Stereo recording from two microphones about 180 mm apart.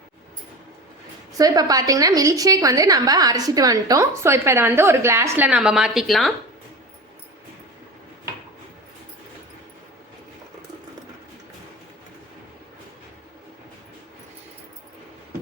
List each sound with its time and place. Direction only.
1.4 s a woman's voice: 20° right (ahead or behind); by 6.3 s centre (ahead or behind)